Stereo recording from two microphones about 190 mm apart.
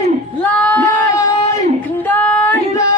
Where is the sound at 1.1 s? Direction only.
20° left (ahead or behind).